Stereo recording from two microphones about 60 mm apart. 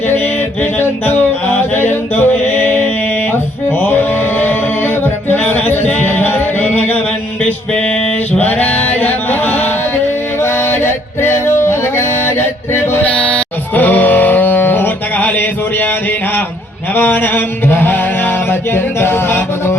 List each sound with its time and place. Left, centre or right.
0.6 s music: left
8.4 s male singing: left
10.4 s music: left
13.1 s music: left
16.9 s mantra: left
18.7 s music: left